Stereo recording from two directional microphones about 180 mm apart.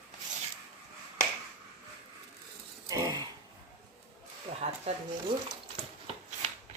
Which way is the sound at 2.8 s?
20° right (ahead or behind).